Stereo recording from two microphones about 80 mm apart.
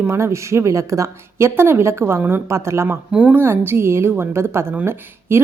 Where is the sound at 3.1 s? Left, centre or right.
Centre.